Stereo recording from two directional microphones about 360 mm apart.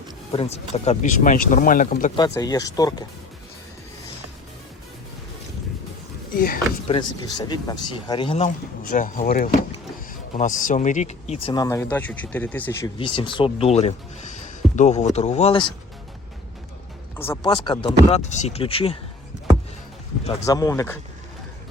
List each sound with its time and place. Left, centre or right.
0.3 s speech: centre
6.3 s speech: left
6.8 s speech: centre
17.2 s speech: centre
20.2 s speech: centre